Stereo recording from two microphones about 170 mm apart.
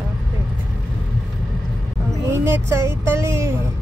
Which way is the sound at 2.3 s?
15° right (ahead or behind).